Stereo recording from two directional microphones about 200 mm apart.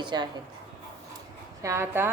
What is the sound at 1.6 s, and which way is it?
Speech, 15° right (ahead or behind).